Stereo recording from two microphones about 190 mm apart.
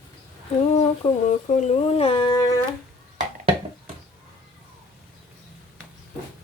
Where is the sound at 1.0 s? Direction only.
30° left (ahead or behind).